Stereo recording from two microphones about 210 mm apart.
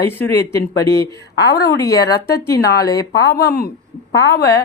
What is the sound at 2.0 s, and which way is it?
Speech, 50° left (ahead or behind).